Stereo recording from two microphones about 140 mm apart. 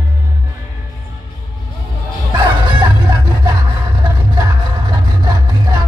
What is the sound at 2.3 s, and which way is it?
Music, 35° right (ahead or behind).